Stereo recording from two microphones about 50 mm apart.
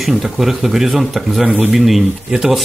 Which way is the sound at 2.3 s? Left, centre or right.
Centre.